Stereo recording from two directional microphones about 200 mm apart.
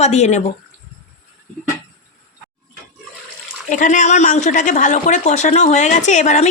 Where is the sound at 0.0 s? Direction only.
35° left (ahead or behind).